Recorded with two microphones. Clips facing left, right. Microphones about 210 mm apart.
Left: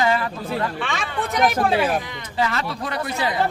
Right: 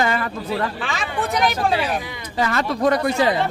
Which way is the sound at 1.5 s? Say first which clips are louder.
Left 2 dB; 50° left (ahead or behind).